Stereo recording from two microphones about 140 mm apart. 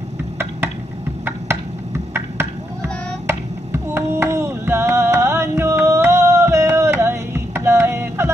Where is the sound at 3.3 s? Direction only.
20° right (ahead or behind).